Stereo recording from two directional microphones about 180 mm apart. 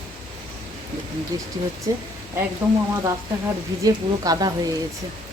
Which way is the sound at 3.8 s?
20° right (ahead or behind).